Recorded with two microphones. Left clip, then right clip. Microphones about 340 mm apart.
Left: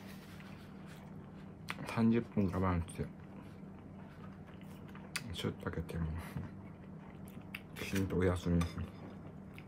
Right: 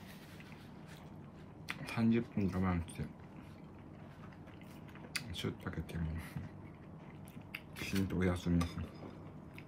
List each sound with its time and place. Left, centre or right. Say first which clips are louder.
1.7 s a sound: left 1 dB; centre
2.4 s speech: left 2 dB; centre
5.1 s speech: even; centre
7.5 s speech: even; centre